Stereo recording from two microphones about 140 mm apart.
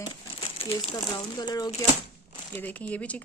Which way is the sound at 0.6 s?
45° left (ahead or behind).